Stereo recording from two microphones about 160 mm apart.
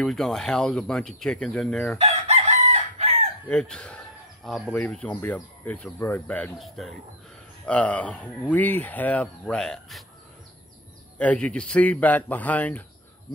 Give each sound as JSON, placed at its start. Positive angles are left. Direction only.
{"t": 0.0, "sound": "speech", "side_deg": 0}
{"t": 2.0, "sound": "chicken", "side_deg": -40}
{"t": 3.4, "sound": "speech", "side_deg": 5}
{"t": 11.1, "sound": "speech", "side_deg": 10}